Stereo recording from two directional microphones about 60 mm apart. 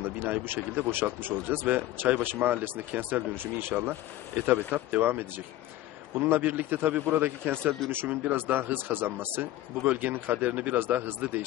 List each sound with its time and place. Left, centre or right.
0.0 s speech: right